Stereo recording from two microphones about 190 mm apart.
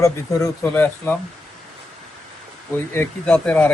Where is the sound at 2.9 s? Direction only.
10° left (ahead or behind).